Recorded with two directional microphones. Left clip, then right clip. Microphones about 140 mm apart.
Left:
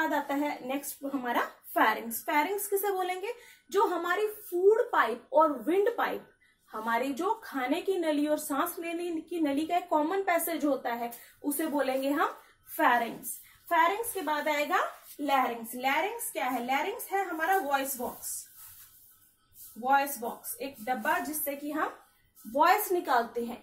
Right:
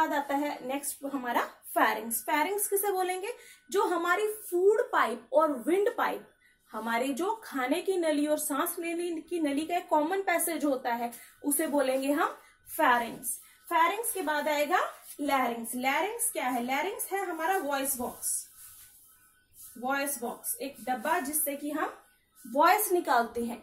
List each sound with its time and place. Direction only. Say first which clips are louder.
0.0 s a woman's voice: right 1 dB; centre (ahead or behind)
19.8 s a woman's voice: left 5 dB; 15° right (ahead or behind)